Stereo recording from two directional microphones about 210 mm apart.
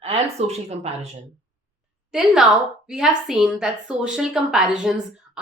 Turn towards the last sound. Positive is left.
turn(degrees=-5)  # may be behind; listen again after turning